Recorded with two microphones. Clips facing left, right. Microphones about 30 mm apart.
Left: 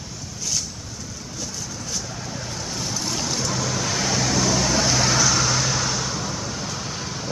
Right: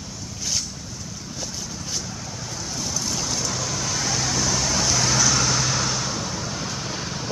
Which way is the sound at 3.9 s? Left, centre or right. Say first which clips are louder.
Left 1 dB; left.